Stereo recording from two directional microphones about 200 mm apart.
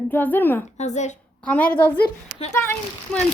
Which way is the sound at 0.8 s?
35° left (ahead or behind).